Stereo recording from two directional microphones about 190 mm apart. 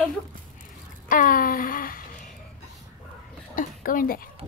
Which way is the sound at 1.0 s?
45° left (ahead or behind).